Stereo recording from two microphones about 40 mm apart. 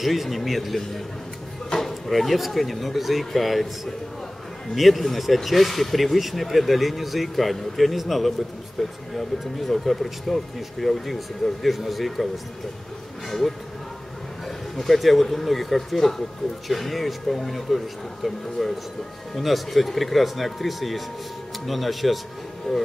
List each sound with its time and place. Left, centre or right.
0.0 s speech: centre
14.8 s speech: centre
22.7 s speech: centre